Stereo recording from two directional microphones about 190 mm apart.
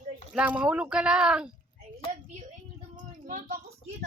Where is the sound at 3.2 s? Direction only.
45° right (ahead or behind).